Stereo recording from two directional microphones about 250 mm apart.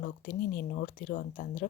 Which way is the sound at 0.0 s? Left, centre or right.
Left.